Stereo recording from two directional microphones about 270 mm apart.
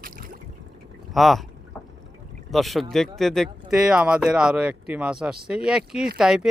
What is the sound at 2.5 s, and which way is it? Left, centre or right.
Speech, centre.